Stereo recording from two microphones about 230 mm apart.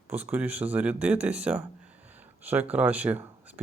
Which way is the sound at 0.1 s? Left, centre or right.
Centre.